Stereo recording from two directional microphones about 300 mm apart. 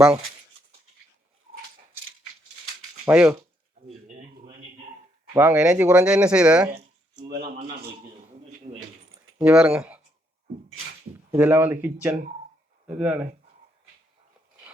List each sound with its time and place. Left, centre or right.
3.1 s speech: centre
4.2 s a sound: right
5.3 s speech: centre
8.7 s speech: right
9.4 s speech: centre
11.3 s speech: centre